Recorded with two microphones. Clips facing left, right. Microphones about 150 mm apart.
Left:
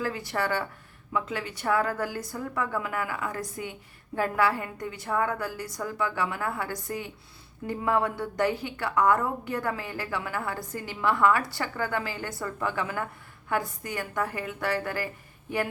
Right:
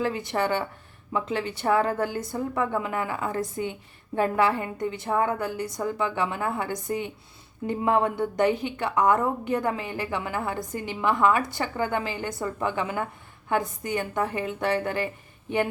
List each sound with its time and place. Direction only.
0.0 s a woman's voice: 20° right (ahead or behind)